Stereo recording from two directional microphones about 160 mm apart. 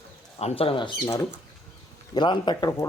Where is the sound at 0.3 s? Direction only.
40° left (ahead or behind).